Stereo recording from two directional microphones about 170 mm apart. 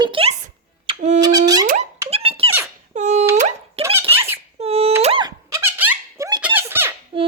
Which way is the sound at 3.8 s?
15° right (ahead or behind).